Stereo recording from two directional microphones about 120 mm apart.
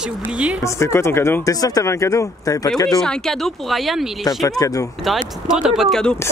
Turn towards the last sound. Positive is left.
turn(degrees=5)  # may be behind; listen again after turning